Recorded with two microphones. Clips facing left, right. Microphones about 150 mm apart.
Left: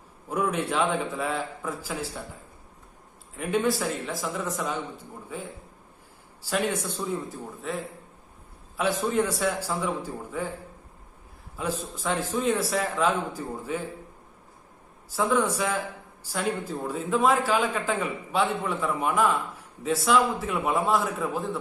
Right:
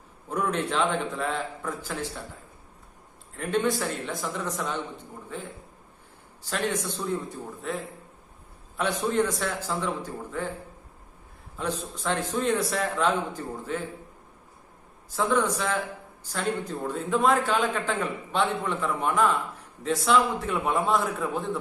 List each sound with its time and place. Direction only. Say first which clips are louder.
0.3 s a man's voice: left 1 dB; 10° left (ahead or behind)
3.3 s a man's voice: even; 5° left (ahead or behind)
8.8 s a man's voice: even; 5° left (ahead or behind)
11.5 s a man's voice: even; 5° left (ahead or behind)
15.1 s a man's voice: even; 5° left (ahead or behind)